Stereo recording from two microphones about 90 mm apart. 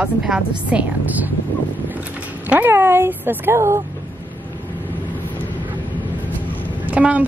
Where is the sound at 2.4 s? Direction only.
20° right (ahead or behind).